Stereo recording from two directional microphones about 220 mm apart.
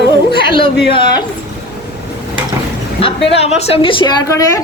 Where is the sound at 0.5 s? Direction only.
25° left (ahead or behind).